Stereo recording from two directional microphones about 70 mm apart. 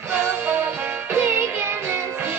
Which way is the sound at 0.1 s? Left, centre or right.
Right.